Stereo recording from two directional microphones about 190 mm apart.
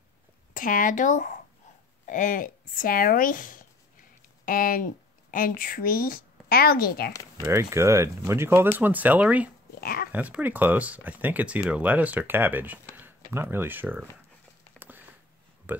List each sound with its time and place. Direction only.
0.6 s speech: 45° left (ahead or behind)
7.1 s speech: 15° left (ahead or behind)
7.4 s speech: 15° right (ahead or behind)
9.8 s dog: 50° left (ahead or behind)
10.1 s speech: 10° right (ahead or behind)
14.8 s a sound: 10° right (ahead or behind)
15.7 s speech: 10° right (ahead or behind)